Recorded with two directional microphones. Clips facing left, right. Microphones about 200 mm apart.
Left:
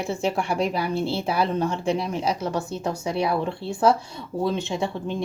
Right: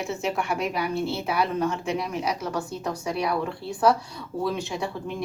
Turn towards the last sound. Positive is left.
turn(degrees=25)  # may be behind; listen again after turning